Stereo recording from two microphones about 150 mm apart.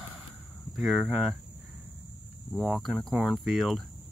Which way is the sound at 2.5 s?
Centre (ahead or behind).